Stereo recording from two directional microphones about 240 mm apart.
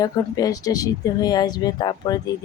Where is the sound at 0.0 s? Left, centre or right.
Centre.